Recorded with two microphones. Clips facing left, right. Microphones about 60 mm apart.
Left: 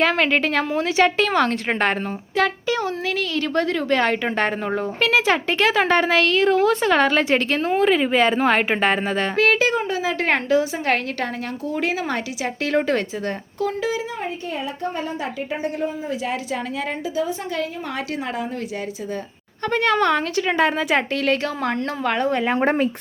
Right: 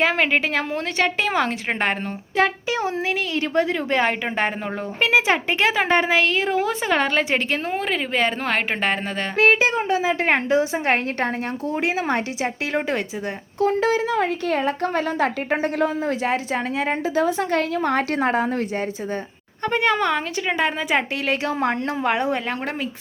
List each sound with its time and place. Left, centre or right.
0.0 s a woman's voice: centre
2.3 s a woman's voice: right; by 9.2 s centre
9.3 s a woman's voice: right
12.7 s speech: centre
14.9 s a woman's voice: right
16.3 s a woman's voice: right
17.2 s a woman's voice: right
19.6 s a woman's voice: centre
21.4 s speech: right